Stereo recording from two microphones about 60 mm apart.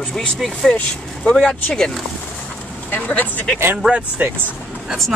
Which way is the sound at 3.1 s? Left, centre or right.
Left.